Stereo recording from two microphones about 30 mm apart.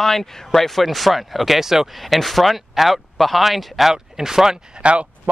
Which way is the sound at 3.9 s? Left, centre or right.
Centre.